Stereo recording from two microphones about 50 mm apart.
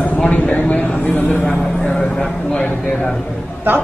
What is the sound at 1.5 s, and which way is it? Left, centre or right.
Vehicle, centre.